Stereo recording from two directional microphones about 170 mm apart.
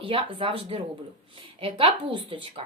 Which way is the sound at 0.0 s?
30° right (ahead or behind).